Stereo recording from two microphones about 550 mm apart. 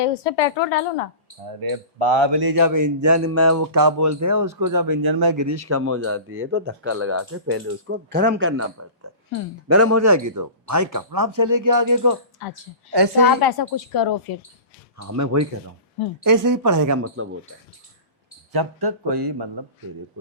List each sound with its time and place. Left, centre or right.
0.0 s a woman's voice: left
1.7 s a man's voice: right
12.9 s speech: right
13.2 s a woman's voice: left
15.0 s a man's voice: right
18.5 s speech: right